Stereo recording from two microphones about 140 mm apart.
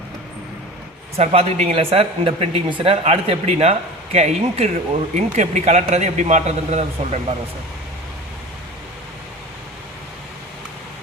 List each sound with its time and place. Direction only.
1.1 s speech: 45° right (ahead or behind)